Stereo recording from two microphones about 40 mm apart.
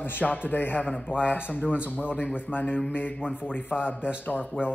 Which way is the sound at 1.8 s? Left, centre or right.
Left.